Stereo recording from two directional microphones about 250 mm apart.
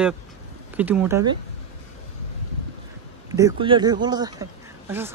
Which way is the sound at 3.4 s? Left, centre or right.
Centre.